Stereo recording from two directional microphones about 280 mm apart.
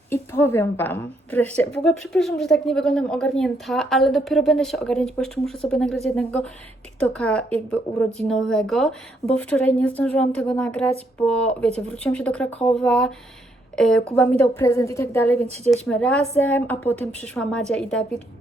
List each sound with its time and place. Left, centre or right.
0.1 s a woman's voice: centre
15.4 s speech: right
15.7 s a woman's voice: centre